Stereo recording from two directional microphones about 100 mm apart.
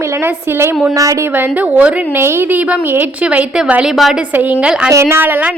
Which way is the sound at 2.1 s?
25° right (ahead or behind).